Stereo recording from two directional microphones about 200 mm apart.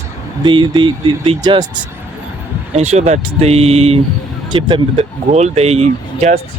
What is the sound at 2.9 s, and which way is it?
Speech, 35° right (ahead or behind).